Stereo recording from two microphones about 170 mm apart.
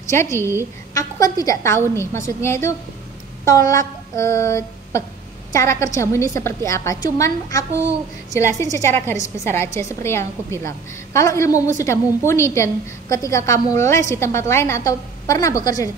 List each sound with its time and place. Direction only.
0.1 s a woman's voice: 15° left (ahead or behind)
0.4 s a woman's voice: 15° right (ahead or behind)
0.9 s a woman's voice: 20° left (ahead or behind)
3.4 s a sound: 20° left (ahead or behind)
5.5 s a woman's voice: 15° left (ahead or behind)